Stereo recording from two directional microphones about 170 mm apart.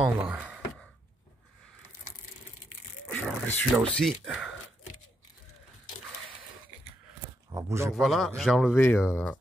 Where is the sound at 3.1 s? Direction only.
5° left (ahead or behind).